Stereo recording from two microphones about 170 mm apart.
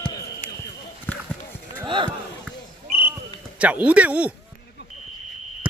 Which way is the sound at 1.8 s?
30° right (ahead or behind).